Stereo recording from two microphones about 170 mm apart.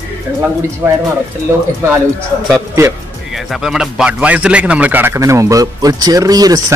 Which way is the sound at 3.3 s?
Centre (ahead or behind).